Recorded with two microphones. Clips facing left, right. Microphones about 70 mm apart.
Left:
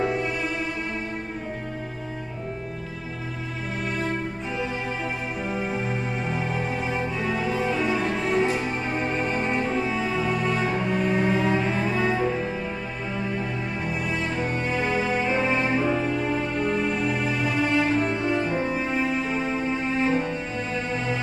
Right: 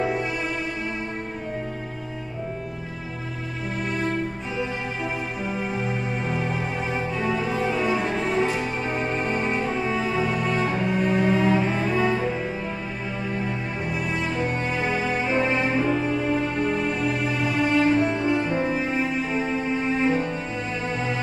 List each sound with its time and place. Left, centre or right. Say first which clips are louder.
0.0 s music: even; centre
5.5 s music: even; centre
13.9 s music: right 2 dB; centre